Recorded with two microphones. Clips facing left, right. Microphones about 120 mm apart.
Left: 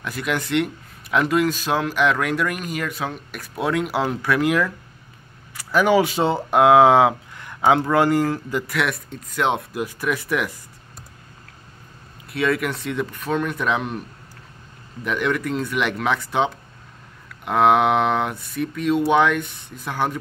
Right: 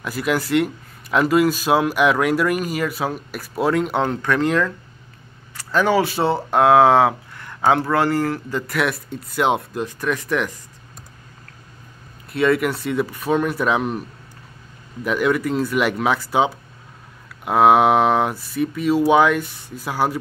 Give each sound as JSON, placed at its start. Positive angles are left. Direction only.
{"t": 0.0, "sound": "speech", "side_deg": -5}
{"t": 8.6, "sound": "speech", "side_deg": 0}
{"t": 9.7, "sound": "speech", "side_deg": 10}
{"t": 12.3, "sound": "speech", "side_deg": 0}
{"t": 15.0, "sound": "speech", "side_deg": -5}